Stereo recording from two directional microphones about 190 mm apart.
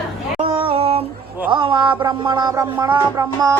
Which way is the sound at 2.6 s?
20° right (ahead or behind).